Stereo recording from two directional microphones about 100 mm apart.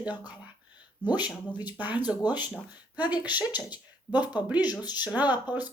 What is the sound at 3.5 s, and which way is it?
Speech, 45° left (ahead or behind).